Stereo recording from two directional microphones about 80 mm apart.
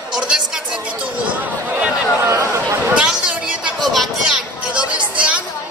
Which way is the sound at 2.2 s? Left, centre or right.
Right.